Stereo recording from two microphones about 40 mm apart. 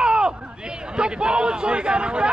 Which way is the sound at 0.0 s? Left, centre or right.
Right.